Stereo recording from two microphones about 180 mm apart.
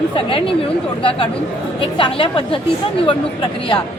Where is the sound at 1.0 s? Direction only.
30° left (ahead or behind).